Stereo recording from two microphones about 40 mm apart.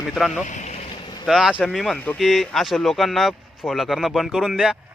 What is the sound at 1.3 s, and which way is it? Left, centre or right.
Speech, centre.